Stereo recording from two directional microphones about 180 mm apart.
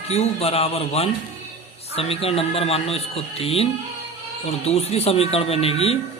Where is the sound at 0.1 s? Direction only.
35° left (ahead or behind).